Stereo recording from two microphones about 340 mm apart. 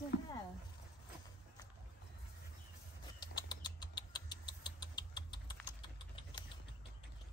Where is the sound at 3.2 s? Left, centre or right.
Centre.